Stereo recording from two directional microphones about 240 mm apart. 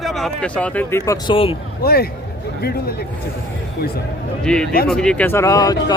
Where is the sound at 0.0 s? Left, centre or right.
Centre; by 1.5 s left.